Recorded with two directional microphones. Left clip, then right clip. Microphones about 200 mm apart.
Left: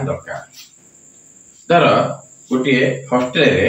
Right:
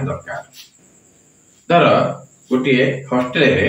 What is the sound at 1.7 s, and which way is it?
A man's voice, 10° right (ahead or behind).